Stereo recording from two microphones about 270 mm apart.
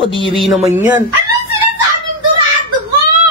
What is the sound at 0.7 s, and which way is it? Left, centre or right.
Speech, centre.